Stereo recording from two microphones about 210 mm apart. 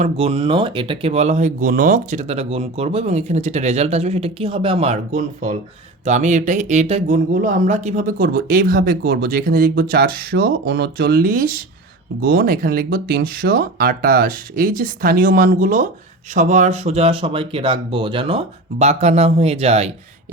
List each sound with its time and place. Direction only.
0.0 s speech: 30° right (ahead or behind)